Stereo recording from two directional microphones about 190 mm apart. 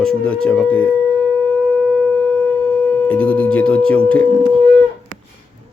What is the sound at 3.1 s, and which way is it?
Speech, 5° left (ahead or behind).